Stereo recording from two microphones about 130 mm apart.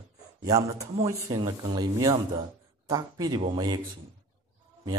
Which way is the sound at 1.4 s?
40° right (ahead or behind).